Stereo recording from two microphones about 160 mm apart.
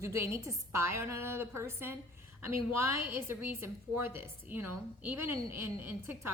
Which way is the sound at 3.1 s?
15° right (ahead or behind).